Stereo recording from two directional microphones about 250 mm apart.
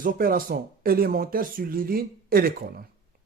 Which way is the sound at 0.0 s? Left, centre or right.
Right.